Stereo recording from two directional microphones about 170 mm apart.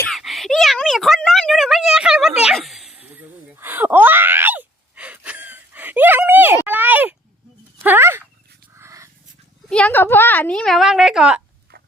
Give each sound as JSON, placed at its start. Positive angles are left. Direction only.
{"t": 0.1, "sound": "a sound", "side_deg": 0}
{"t": 9.6, "sound": "a woman's voice", "side_deg": 5}
{"t": 11.7, "sound": "mechanisms", "side_deg": -60}